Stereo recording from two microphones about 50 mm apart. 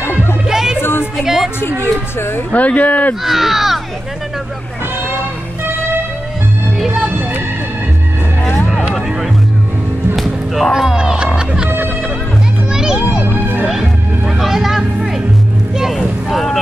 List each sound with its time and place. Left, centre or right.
0.0 s music: left
0.5 s music: centre
0.7 s a sound: left
1.1 s music: centre
1.6 s speech: left
2.5 s speech: left
3.3 s speech: centre
10.1 s music: centre
10.7 s speech: centre
11.0 s music: centre
12.7 s children playing: centre
13.7 s music: centre
16.3 s boat: centre